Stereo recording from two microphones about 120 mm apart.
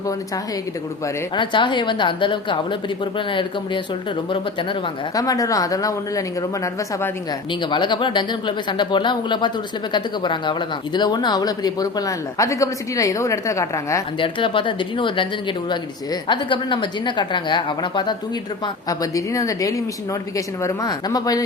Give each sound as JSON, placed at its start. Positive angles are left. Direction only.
{"t": 1.4, "sound": "speech", "side_deg": 40}
{"t": 5.1, "sound": "a woman's voice", "side_deg": 30}
{"t": 7.6, "sound": "speech", "side_deg": 40}
{"t": 14.2, "sound": "speech", "side_deg": 45}
{"t": 16.3, "sound": "speech", "side_deg": 40}
{"t": 18.6, "sound": "a woman's voice", "side_deg": 30}